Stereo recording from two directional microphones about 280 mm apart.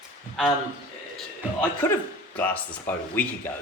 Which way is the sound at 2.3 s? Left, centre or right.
Centre.